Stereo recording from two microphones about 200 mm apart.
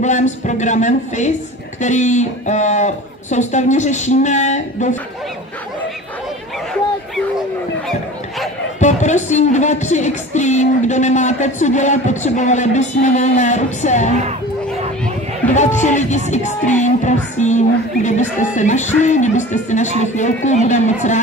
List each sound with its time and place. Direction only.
0.0 s speech: 35° left (ahead or behind)
8.7 s speech: 35° left (ahead or behind)
15.4 s music: 10° left (ahead or behind)
15.8 s speech: 35° left (ahead or behind)